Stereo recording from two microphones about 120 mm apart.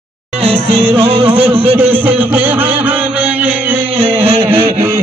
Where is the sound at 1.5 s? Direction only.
15° right (ahead or behind).